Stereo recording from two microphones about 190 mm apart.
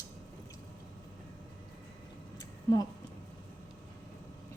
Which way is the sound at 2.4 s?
20° left (ahead or behind).